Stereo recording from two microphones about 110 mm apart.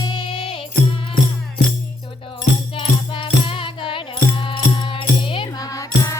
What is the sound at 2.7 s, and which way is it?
Music, 55° left (ahead or behind).